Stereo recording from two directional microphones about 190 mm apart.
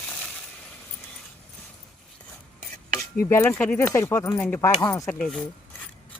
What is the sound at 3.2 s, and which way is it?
Speech, 15° left (ahead or behind).